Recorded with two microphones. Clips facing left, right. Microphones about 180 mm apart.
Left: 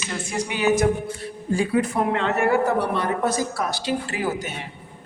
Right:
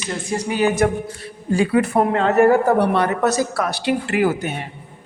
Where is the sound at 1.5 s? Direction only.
75° right (ahead or behind).